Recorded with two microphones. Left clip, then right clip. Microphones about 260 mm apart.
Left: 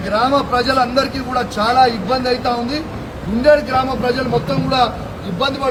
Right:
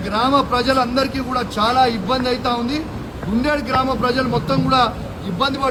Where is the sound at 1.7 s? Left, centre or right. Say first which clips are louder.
Left 5 dB; right.